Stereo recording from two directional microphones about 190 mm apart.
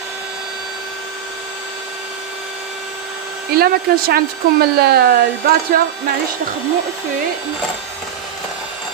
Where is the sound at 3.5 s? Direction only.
50° right (ahead or behind).